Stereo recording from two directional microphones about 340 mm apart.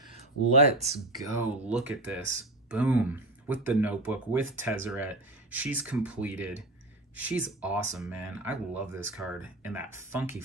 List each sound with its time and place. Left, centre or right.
0.6 s speech: centre
1.3 s speech: centre